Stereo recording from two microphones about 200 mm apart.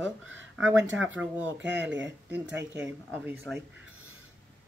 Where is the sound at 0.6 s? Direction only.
65° right (ahead or behind).